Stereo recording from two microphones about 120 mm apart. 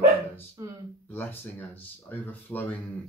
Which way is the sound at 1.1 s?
15° left (ahead or behind).